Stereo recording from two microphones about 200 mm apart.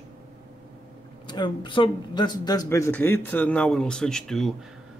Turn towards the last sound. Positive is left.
turn(degrees=0)  # may be behind; listen again after turning